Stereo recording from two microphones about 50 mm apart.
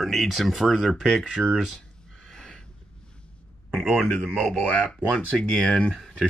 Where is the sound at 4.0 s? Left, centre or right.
Centre.